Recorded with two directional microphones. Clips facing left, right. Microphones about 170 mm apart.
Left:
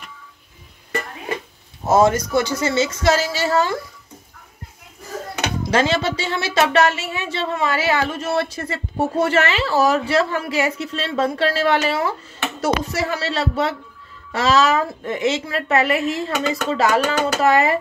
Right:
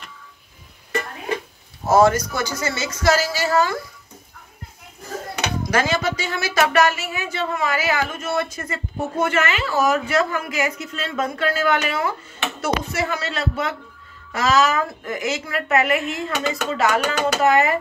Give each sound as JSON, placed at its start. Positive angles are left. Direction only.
{"t": 1.9, "sound": "a woman's voice", "side_deg": 20}
{"t": 5.7, "sound": "a woman's voice", "side_deg": 25}